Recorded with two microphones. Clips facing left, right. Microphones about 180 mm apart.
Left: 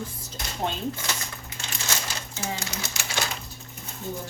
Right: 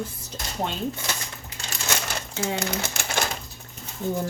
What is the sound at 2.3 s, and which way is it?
Speech, 65° right (ahead or behind).